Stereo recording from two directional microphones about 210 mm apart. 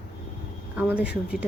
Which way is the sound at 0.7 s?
5° right (ahead or behind).